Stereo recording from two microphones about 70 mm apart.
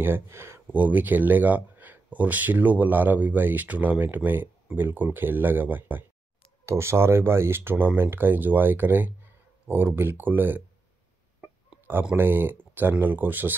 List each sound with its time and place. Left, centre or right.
0.0 s speech: right
0.7 s speech: right
6.6 s speech: right
12.2 s speech: right